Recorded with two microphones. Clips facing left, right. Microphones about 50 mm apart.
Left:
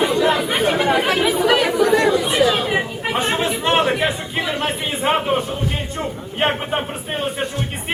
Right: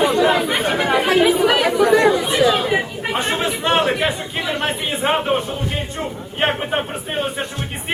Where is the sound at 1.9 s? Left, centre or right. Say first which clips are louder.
Right 4 dB; right.